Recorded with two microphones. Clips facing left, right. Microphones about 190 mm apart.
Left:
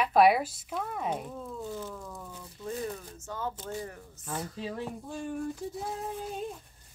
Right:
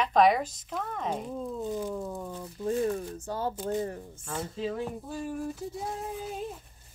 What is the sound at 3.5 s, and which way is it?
Speech, 10° right (ahead or behind).